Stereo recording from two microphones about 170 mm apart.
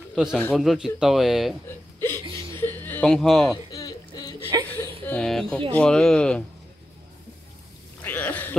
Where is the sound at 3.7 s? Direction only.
20° left (ahead or behind).